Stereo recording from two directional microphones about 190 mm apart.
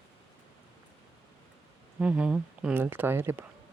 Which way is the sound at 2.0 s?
5° right (ahead or behind).